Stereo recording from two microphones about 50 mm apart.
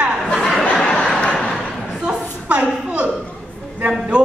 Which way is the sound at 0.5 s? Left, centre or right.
Centre.